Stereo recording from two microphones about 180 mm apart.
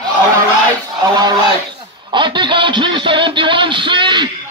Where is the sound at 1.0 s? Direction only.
20° right (ahead or behind).